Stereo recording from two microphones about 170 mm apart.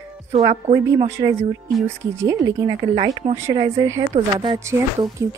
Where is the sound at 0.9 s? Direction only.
15° right (ahead or behind).